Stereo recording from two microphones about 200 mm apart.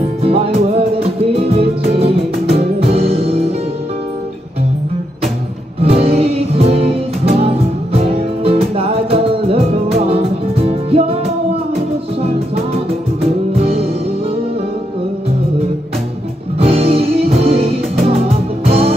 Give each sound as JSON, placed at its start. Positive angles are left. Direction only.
{"t": 0.2, "sound": "music", "side_deg": -30}
{"t": 5.8, "sound": "music", "side_deg": -30}
{"t": 8.0, "sound": "music", "side_deg": -30}
{"t": 13.5, "sound": "music", "side_deg": -30}
{"t": 16.6, "sound": "music", "side_deg": -30}